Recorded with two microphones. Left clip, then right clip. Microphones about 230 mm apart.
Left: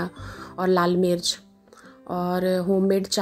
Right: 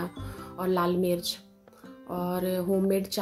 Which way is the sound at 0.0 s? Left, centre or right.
Left.